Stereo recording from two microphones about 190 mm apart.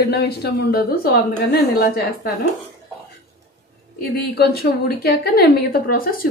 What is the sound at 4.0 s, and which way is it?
A woman's voice, 55° left (ahead or behind).